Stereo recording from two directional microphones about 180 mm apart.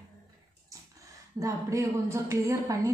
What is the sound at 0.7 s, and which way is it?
Speech, 20° right (ahead or behind).